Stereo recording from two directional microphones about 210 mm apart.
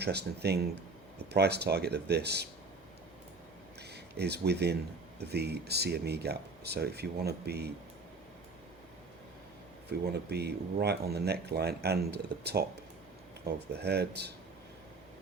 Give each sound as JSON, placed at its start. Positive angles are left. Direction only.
{"t": 0.0, "sound": "speech", "side_deg": -50}
{"t": 3.9, "sound": "speech", "side_deg": -50}
{"t": 10.1, "sound": "speech", "side_deg": -50}
{"t": 13.7, "sound": "speech", "side_deg": -50}